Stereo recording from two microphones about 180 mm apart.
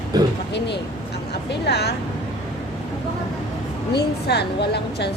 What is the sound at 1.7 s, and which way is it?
Speech, 65° left (ahead or behind).